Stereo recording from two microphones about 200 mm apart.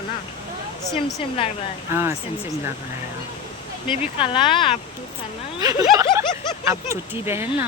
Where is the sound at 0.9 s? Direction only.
25° left (ahead or behind).